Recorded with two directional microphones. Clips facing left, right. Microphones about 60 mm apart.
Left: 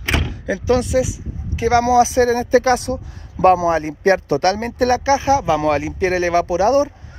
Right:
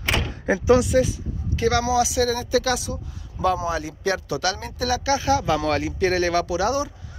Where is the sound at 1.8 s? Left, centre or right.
Left.